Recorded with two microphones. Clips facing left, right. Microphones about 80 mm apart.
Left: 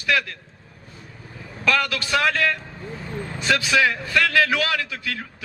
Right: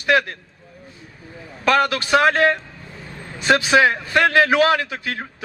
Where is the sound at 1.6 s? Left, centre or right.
Right.